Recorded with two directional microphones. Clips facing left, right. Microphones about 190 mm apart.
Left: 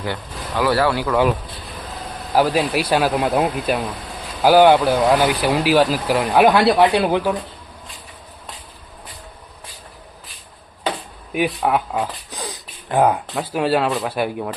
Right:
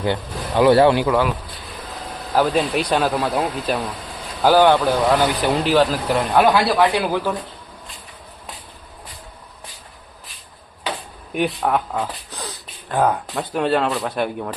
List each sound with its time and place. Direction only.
0.0 s speech: 25° right (ahead or behind)
2.3 s speech: 5° left (ahead or behind)
3.2 s speech: 20° left (ahead or behind)
6.7 s speech: 20° left (ahead or behind)
11.3 s speech: 5° left (ahead or behind)
12.3 s a sound: 15° left (ahead or behind)
13.2 s speech: centre (ahead or behind)